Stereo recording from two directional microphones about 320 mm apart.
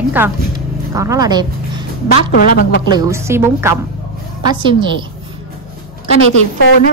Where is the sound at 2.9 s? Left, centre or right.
Centre.